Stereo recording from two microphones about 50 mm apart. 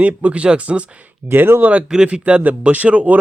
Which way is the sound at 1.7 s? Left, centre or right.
Centre.